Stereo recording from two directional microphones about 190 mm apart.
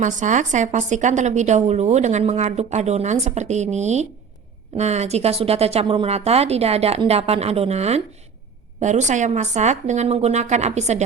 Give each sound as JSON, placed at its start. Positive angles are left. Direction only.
{"t": 0.0, "sound": "a woman's voice", "side_deg": -40}